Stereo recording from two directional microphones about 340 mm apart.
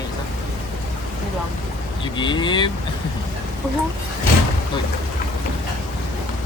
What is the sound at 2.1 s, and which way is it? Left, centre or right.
Speech, centre.